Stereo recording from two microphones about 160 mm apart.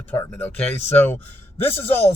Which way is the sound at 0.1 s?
10° left (ahead or behind).